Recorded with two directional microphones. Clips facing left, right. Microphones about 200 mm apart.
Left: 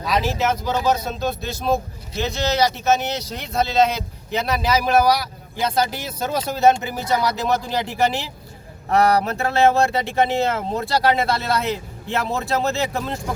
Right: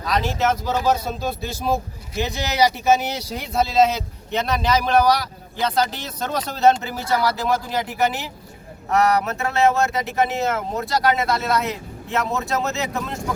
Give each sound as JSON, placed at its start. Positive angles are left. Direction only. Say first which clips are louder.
{"t": 0.0, "sound": "speech", "louder": "even", "side_deg": 5}